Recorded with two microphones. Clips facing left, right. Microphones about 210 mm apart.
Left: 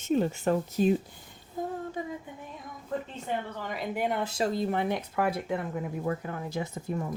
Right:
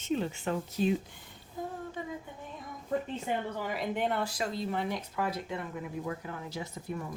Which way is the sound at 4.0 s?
15° left (ahead or behind).